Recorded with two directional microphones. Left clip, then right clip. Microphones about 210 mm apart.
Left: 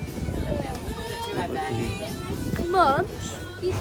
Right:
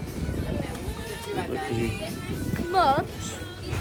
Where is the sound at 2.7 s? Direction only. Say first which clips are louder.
Left 1 dB; 55° left (ahead or behind).